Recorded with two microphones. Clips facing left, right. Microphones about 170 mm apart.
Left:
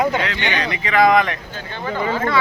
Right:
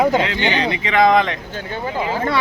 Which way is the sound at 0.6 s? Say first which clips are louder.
Even; 25° right (ahead or behind).